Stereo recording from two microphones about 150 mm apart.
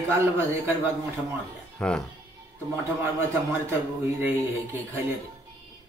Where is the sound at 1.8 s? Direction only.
5° left (ahead or behind).